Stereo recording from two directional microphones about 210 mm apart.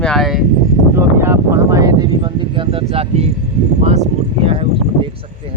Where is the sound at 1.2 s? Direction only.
10° right (ahead or behind); by 3.3 s 30° right (ahead or behind).